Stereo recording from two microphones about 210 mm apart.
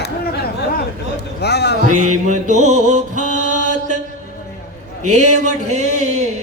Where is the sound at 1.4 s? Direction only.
50° left (ahead or behind).